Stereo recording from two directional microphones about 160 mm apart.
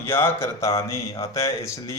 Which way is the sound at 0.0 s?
15° left (ahead or behind).